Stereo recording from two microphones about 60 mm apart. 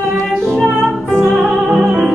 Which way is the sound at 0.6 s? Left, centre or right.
Centre.